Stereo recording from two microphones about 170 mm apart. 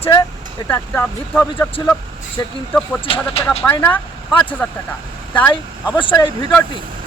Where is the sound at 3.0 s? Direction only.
30° left (ahead or behind).